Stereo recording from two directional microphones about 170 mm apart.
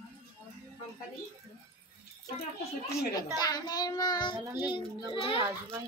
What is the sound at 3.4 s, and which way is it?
Child singing, 25° left (ahead or behind).